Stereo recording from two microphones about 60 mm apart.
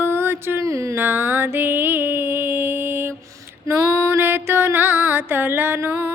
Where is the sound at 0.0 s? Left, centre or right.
Right.